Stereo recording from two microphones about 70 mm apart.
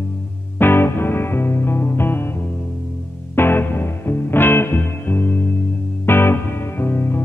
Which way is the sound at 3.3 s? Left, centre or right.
Left.